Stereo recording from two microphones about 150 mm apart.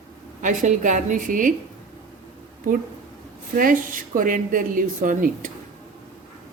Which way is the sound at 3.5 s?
65° right (ahead or behind).